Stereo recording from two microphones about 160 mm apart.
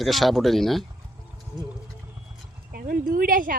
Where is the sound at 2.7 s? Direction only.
65° right (ahead or behind).